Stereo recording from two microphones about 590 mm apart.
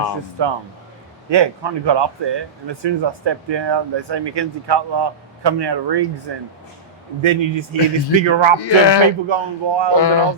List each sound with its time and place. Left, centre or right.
0.4 s speech: right
7.2 s speech: right
8.5 s speech: left
9.3 s speech: right
10.0 s speech: left